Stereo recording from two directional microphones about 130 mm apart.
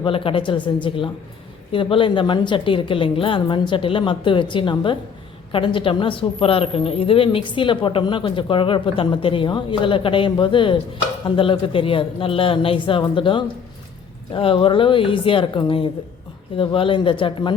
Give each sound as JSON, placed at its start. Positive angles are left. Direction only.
{"t": 0.0, "sound": "a woman's voice", "side_deg": 40}